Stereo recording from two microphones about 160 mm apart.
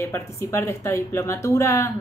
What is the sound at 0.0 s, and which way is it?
Speech, 15° left (ahead or behind).